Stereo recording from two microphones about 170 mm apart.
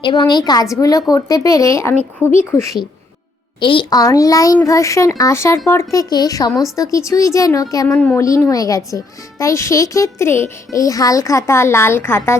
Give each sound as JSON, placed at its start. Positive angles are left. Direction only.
{"t": 0.0, "sound": "speech", "side_deg": 25}
{"t": 3.6, "sound": "speech", "side_deg": 30}